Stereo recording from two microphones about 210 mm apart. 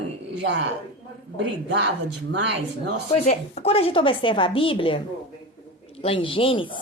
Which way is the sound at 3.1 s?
30° left (ahead or behind).